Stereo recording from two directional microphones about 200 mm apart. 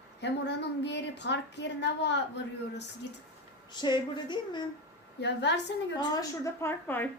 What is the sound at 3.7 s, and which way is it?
Speech, 20° left (ahead or behind).